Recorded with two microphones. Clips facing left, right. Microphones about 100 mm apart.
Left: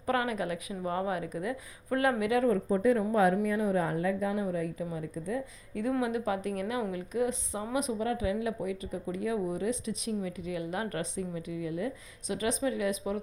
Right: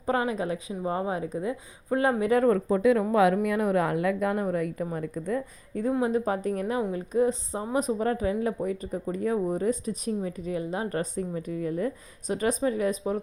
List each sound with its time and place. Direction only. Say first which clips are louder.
0.0 s speech: right 3 dB; 25° right (ahead or behind)
2.3 s speech: right 6 dB; 50° right (ahead or behind)
2.6 s speech: right 4 dB; 90° right
3.4 s a woman's voice: right 4 dB; 70° right (ahead or behind)
5.9 s speech: right 4 dB; 35° right (ahead or behind)